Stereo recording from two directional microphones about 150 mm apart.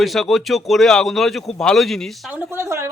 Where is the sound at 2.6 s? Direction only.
20° right (ahead or behind).